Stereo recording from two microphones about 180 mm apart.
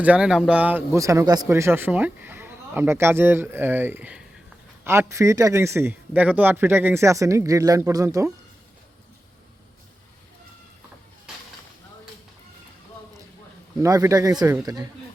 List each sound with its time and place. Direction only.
0.0 s speech: 5° right (ahead or behind)
13.8 s a man's voice: 20° right (ahead or behind)